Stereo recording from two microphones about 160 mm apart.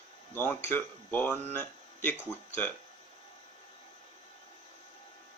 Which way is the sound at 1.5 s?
10° left (ahead or behind).